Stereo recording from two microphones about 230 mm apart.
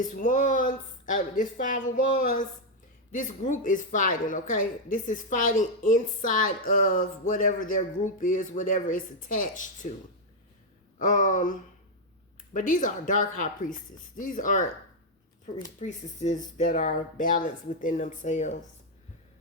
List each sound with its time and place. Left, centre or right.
0.2 s speech: left
10.9 s speech: left
12.5 s speech: left